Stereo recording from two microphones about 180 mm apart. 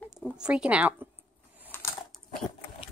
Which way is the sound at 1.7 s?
15° left (ahead or behind).